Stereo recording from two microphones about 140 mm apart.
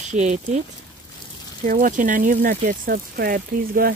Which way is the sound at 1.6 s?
75° right (ahead or behind).